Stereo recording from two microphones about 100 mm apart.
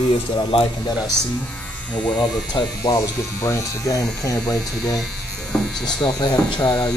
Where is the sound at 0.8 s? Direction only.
45° left (ahead or behind).